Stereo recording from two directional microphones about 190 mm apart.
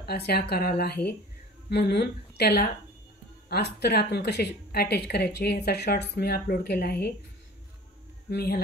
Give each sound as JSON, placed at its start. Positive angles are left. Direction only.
{"t": 0.0, "sound": "speech", "side_deg": 55}
{"t": 8.3, "sound": "speech", "side_deg": 55}